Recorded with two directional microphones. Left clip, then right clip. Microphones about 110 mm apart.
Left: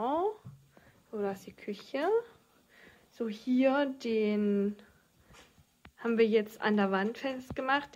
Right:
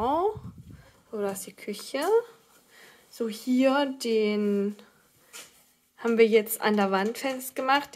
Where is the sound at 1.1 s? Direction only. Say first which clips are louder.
Right 4 dB; 25° right (ahead or behind).